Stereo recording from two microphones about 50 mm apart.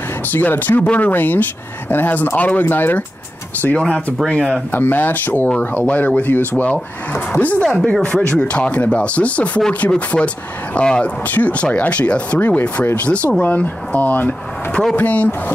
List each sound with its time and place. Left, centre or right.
0.3 s speech: left
2.7 s speech: left
3.6 s speech: left
7.8 s speech: centre